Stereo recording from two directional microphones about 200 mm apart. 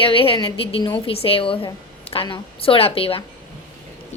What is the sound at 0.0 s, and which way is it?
A woman's voice, 25° left (ahead or behind).